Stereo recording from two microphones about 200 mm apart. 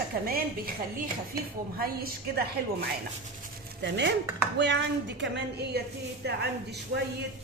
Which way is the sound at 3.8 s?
60° right (ahead or behind).